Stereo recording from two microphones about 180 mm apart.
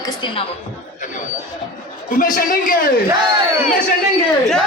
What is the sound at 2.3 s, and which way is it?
Speech, 50° left (ahead or behind).